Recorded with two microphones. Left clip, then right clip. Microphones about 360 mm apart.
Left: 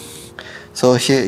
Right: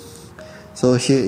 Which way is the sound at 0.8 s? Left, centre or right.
Left.